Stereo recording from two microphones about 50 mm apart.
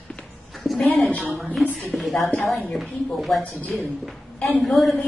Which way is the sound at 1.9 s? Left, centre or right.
Centre.